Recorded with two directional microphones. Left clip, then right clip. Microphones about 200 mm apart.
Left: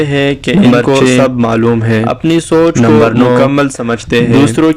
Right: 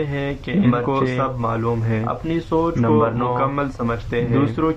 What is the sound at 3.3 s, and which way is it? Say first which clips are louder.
A man's voice: left 12 dB; 25° left (ahead or behind).